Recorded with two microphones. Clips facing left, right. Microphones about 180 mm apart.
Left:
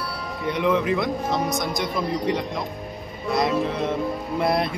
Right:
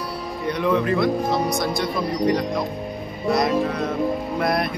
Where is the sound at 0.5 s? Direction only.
20° left (ahead or behind).